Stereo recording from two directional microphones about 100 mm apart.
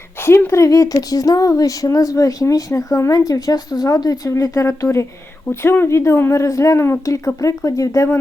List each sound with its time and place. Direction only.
0.2 s speech: 25° left (ahead or behind)